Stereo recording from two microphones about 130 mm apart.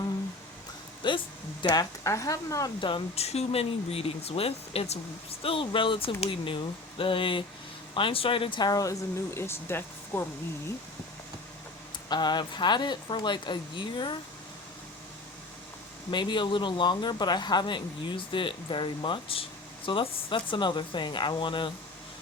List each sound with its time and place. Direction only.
1.0 s a sound: 35° left (ahead or behind)
1.6 s speech: 30° left (ahead or behind)
2.8 s speech: 40° left (ahead or behind)
3.2 s speech: 50° left (ahead or behind); by 10.2 s 20° left (ahead or behind)
12.0 s speech: 35° left (ahead or behind)
16.0 s speech: 35° left (ahead or behind)